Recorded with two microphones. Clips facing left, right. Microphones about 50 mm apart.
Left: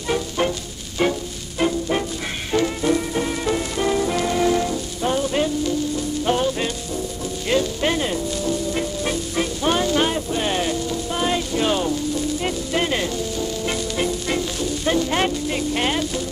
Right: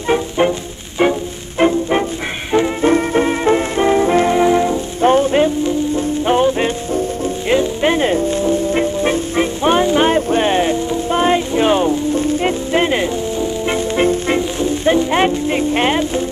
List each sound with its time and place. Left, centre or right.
0.1 s music: right
5.0 s music: right
10.0 s music: right